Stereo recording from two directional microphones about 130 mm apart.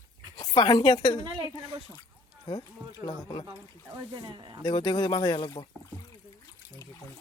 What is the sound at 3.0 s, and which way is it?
Speech, 35° left (ahead or behind).